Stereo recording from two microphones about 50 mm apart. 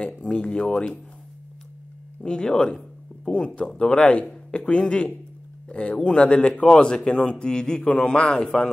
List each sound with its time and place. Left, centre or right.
0.0 s speech: left
2.2 s a man's voice: centre